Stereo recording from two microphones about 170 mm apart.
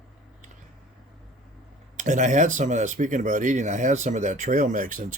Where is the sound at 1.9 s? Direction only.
45° right (ahead or behind).